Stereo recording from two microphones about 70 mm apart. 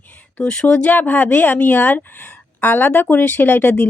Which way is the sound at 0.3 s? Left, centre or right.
Centre.